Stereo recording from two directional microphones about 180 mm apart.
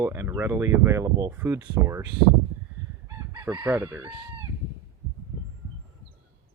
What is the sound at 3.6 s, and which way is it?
Speech, 10° right (ahead or behind).